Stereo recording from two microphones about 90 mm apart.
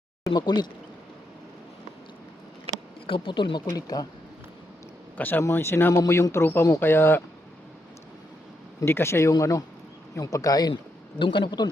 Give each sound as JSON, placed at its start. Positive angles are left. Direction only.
{"t": 0.3, "sound": "speech", "side_deg": 50}
{"t": 3.1, "sound": "speech", "side_deg": 70}
{"t": 3.7, "sound": "speech", "side_deg": 45}
{"t": 5.1, "sound": "speech", "side_deg": 20}
{"t": 8.8, "sound": "speech", "side_deg": 30}
{"t": 9.3, "sound": "speech", "side_deg": 40}
{"t": 11.2, "sound": "speech", "side_deg": 65}